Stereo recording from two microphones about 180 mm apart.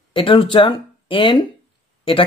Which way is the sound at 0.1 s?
30° left (ahead or behind).